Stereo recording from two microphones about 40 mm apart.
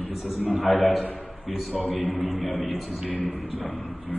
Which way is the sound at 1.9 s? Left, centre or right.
Left.